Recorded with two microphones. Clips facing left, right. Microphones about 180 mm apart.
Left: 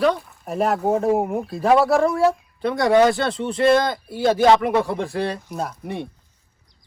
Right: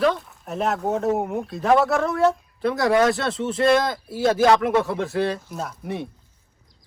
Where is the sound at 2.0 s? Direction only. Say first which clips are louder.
Left 2 dB; centre (ahead or behind).